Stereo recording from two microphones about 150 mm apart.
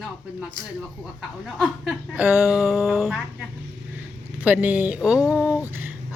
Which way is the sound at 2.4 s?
Centre (ahead or behind).